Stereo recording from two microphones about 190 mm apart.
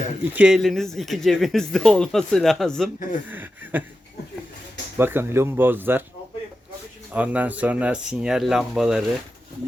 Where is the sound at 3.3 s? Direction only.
10° right (ahead or behind).